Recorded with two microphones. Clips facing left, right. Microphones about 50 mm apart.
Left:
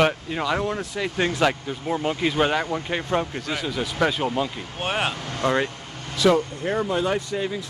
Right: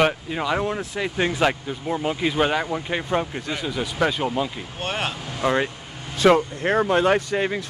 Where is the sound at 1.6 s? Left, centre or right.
Centre.